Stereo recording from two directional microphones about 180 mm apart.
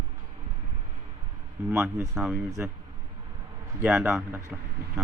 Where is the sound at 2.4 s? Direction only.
15° right (ahead or behind).